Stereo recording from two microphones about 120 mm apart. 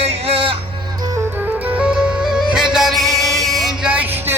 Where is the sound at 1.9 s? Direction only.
5° right (ahead or behind).